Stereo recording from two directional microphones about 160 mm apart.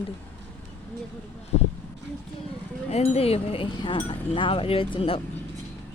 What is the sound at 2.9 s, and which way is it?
Speech, 40° left (ahead or behind).